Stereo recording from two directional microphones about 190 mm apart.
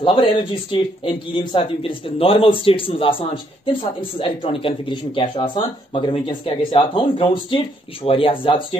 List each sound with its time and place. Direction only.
0.0 s speech: 25° left (ahead or behind)